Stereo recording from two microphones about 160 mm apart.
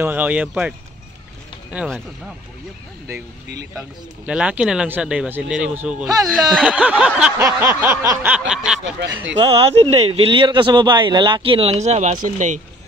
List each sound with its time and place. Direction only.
0.0 s a sound: 10° right (ahead or behind)
1.7 s speech: 5° right (ahead or behind)
4.3 s speech: 5° right (ahead or behind)
6.5 s a sound: 5° right (ahead or behind)
8.3 s snicker: 5° right (ahead or behind)
9.4 s speech: 35° right (ahead or behind)